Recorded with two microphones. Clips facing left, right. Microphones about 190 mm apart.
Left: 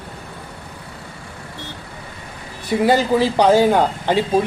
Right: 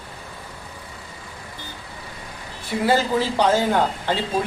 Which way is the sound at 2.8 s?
15° left (ahead or behind).